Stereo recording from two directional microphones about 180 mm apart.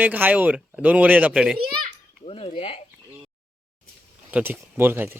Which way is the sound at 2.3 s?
30° left (ahead or behind).